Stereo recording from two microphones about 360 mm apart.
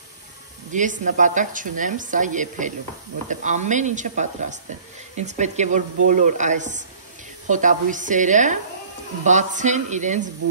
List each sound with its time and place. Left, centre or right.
0.7 s speech: right